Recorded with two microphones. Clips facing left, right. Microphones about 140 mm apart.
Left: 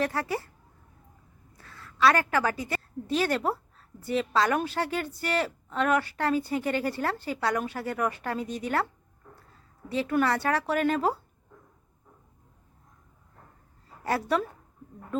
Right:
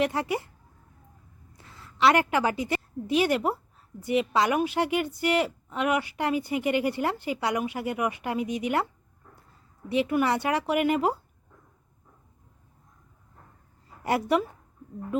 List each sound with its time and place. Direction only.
0.0 s speech: 20° right (ahead or behind)
1.5 s a woman's voice: 20° right (ahead or behind)
9.9 s a woman's voice: 15° right (ahead or behind)
14.0 s a woman's voice: 15° right (ahead or behind)